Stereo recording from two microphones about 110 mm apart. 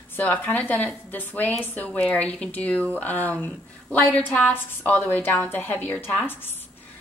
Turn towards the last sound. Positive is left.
turn(degrees=20)  # may be behind; listen again after turning